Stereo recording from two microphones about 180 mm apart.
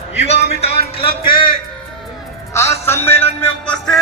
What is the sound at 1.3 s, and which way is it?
Music, 25° left (ahead or behind).